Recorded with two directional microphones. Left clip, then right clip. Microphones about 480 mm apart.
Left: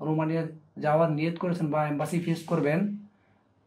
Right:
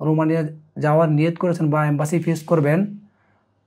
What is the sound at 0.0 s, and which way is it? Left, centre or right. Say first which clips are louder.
A man's voice: right 9 dB; right.